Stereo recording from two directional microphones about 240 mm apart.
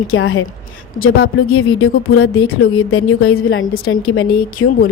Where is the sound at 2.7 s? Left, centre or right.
Left.